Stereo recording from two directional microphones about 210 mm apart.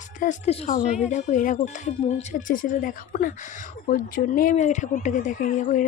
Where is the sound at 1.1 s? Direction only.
40° left (ahead or behind).